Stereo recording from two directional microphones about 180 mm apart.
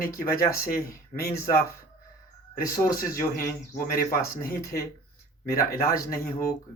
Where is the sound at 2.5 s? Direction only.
55° left (ahead or behind).